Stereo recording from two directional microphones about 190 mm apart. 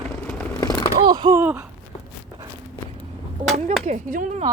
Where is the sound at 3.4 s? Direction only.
35° right (ahead or behind).